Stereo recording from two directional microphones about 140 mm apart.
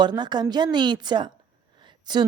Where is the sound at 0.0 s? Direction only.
30° right (ahead or behind).